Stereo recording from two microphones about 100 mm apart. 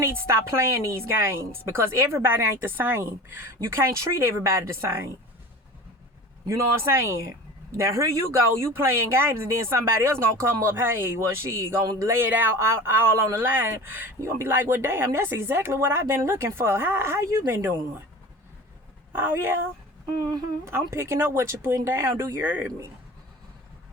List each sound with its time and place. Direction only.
0.0 s speech: 25° right (ahead or behind)
6.4 s speech: 30° right (ahead or behind)
19.1 s speech: 20° right (ahead or behind)
20.1 s speech: 35° right (ahead or behind)
20.7 s speech: 25° right (ahead or behind)